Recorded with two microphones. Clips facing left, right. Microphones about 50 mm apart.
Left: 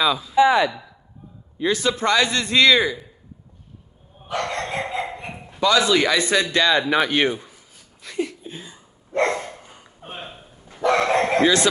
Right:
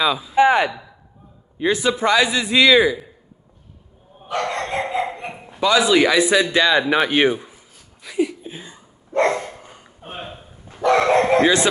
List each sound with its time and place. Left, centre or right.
0.0 s a man's voice: centre
0.4 s a sound: right
1.6 s a man's voice: centre
4.3 s dog: centre
10.0 s a sound: centre
10.8 s dog: centre